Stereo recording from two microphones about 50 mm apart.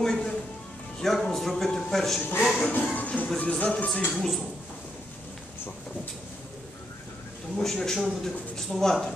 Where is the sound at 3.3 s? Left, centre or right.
Left.